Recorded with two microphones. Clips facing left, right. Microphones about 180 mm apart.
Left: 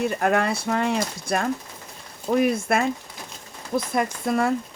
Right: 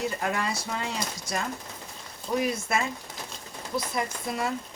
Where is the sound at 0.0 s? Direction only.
60° left (ahead or behind).